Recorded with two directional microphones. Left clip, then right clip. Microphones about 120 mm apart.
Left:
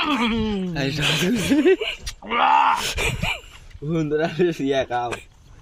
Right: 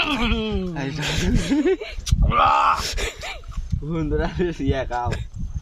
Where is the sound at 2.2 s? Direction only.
30° right (ahead or behind).